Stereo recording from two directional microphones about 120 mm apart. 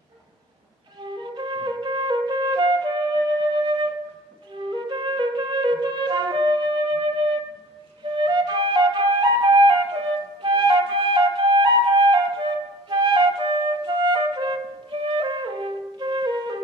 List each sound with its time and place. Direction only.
1.3 s flute: 40° right (ahead or behind)